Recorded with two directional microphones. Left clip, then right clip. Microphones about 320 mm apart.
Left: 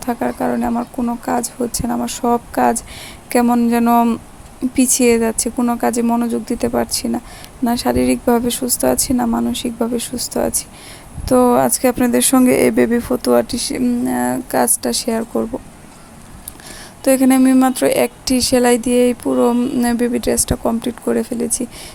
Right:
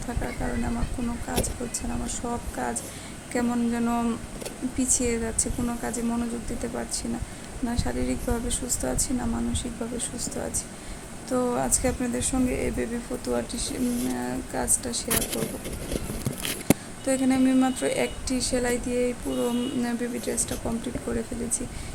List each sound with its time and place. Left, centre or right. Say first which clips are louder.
0.0 s a woman's voice: left 13 dB; left
17.0 s a woman's voice: left 15 dB; left